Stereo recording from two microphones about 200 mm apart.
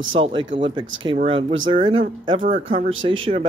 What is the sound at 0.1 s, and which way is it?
Speech, 25° right (ahead or behind).